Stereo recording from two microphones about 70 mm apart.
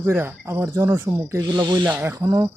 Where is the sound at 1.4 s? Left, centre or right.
Right.